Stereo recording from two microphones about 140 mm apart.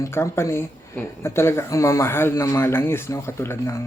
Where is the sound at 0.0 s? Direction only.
20° left (ahead or behind).